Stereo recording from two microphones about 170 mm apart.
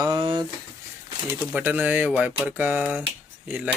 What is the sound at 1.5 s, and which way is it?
Speech, 10° right (ahead or behind).